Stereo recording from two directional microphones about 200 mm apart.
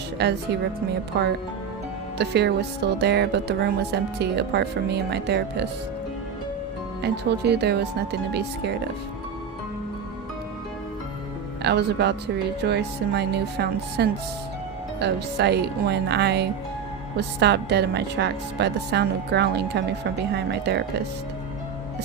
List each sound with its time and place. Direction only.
0.2 s speech: 55° right (ahead or behind)
7.0 s speech: 55° right (ahead or behind)
11.6 s speech: 55° right (ahead or behind)